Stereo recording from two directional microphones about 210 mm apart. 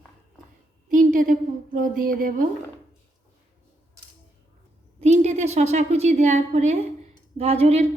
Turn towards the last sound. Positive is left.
turn(degrees=-30)  # may be behind; listen again after turning